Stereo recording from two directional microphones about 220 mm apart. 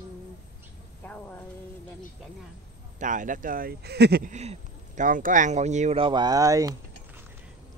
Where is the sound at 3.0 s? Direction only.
35° right (ahead or behind).